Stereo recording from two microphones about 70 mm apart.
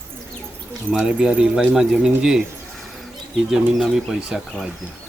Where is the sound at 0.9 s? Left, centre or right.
Centre.